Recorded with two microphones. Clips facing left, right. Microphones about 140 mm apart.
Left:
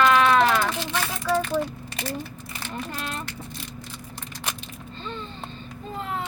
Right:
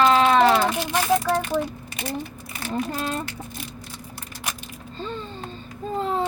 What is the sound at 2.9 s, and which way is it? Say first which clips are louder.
Speech: right 5 dB; 40° right (ahead or behind).